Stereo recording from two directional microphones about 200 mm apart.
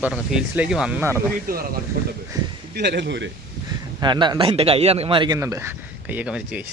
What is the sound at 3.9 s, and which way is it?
Speech, 20° right (ahead or behind).